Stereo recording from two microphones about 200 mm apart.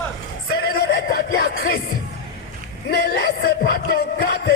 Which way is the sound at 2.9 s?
55° left (ahead or behind).